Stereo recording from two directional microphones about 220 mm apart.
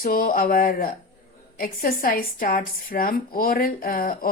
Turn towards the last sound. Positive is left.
turn(degrees=40)  # may be behind; listen again after turning